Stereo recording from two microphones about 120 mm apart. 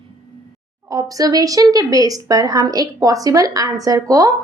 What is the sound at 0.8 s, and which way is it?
A woman's voice, 30° right (ahead or behind).